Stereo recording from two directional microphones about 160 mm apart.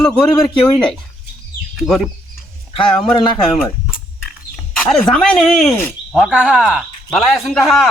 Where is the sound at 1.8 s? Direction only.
Centre (ahead or behind).